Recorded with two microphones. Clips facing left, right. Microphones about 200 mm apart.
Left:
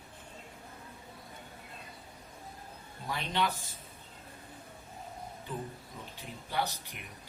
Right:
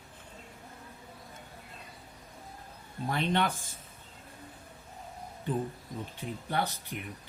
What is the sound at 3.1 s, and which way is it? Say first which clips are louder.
Speech: right 4 dB; 55° right (ahead or behind).